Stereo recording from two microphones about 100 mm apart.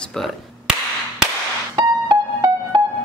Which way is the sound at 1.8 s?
40° right (ahead or behind).